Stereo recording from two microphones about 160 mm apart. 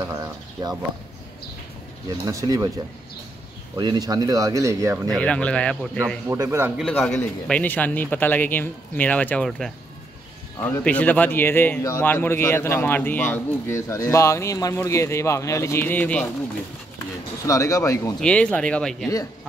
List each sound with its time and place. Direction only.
0.0 s speech: 20° right (ahead or behind)
2.0 s speech: 20° right (ahead or behind)
3.7 s speech: 25° right (ahead or behind)
5.1 s a man's voice: 5° left (ahead or behind)
6.2 s a man's voice: 20° right (ahead or behind)
6.8 s a man's voice: centre (ahead or behind)
17.5 s speech: 20° left (ahead or behind)
18.2 s a man's voice: 5° left (ahead or behind)